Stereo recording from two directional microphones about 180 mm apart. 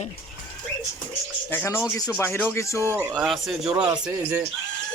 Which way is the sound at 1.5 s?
15° left (ahead or behind).